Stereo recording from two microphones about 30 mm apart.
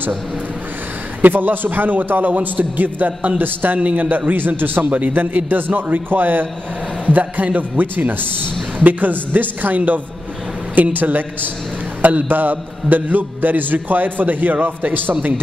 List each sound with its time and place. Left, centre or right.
1.2 s a man's voice: right
3.3 s a man's voice: right
3.8 s a man's voice: right
4.3 s a man's voice: right
4.8 s a man's voice: right
7.1 s a man's voice: right
7.5 s a man's voice: right
8.7 s a man's voice: right
9.3 s a man's voice: right